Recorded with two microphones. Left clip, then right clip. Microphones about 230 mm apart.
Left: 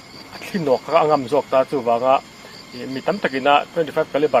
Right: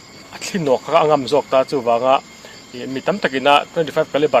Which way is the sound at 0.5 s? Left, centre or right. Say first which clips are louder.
Right 2 dB; right.